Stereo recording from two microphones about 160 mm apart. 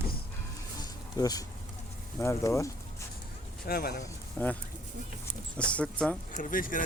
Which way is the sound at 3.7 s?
75° left (ahead or behind).